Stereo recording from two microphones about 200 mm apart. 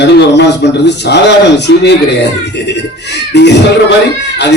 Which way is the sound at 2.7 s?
60° left (ahead or behind).